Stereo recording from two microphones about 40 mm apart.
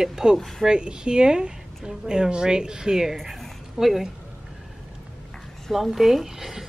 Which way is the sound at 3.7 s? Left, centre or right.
Centre.